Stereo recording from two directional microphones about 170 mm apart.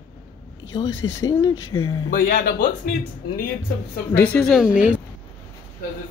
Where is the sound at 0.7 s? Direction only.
25° left (ahead or behind).